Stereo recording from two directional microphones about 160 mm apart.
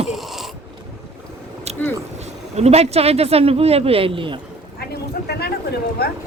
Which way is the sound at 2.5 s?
40° right (ahead or behind).